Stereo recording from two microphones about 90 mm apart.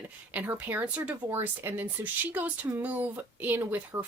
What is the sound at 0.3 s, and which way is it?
Speech, 20° right (ahead or behind).